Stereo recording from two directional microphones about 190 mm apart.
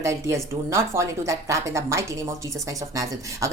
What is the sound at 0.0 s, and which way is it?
Speech, 15° right (ahead or behind).